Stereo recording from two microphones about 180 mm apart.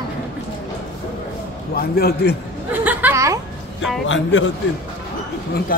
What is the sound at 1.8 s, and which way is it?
Speech, 60° left (ahead or behind).